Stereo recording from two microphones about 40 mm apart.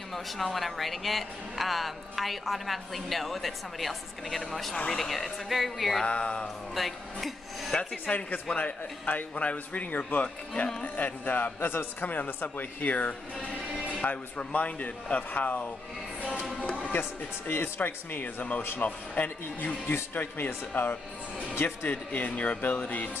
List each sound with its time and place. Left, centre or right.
0.1 s speech: centre
6.0 s speech: left
6.4 s speech: centre
8.1 s speech: left
10.2 s speech: left
11.0 s speech: left
11.6 s speech: left
16.9 s speech: left
17.7 s speech: left
19.2 s speech: left
21.8 s speech: left